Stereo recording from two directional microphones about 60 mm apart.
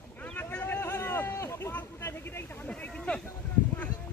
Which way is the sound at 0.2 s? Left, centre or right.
Left.